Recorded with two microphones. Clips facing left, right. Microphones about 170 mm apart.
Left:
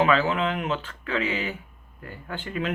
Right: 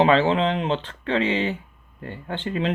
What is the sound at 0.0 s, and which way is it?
Speech, 30° right (ahead or behind).